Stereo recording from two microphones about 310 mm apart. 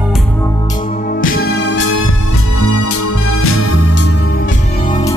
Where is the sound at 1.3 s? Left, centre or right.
Left.